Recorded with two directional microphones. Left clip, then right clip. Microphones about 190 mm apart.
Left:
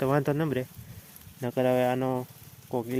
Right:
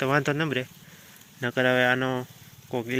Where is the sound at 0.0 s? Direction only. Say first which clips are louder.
Right 2 dB; 20° left (ahead or behind).